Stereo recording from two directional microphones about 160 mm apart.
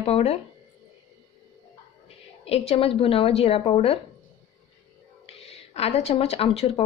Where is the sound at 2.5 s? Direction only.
35° left (ahead or behind).